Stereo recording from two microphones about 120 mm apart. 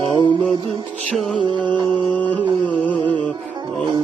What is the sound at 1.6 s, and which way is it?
Music, 40° right (ahead or behind).